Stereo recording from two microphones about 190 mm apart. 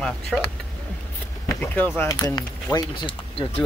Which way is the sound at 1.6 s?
10° left (ahead or behind).